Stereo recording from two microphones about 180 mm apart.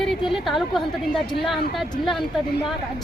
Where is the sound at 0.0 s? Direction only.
Centre (ahead or behind).